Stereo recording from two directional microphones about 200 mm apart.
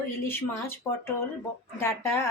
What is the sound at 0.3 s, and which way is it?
Speech, 10° left (ahead or behind).